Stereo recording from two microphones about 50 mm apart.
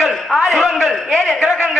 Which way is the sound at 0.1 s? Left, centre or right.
Centre.